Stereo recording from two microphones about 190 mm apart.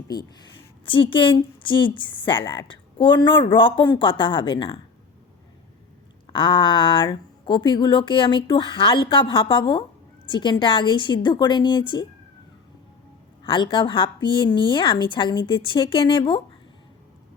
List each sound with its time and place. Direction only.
0.9 s speech: 25° left (ahead or behind)
6.2 s speech: 25° left (ahead or behind)
13.4 s speech: 25° left (ahead or behind)